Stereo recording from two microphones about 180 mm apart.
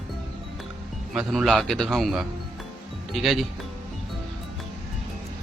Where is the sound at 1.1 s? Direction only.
Centre (ahead or behind).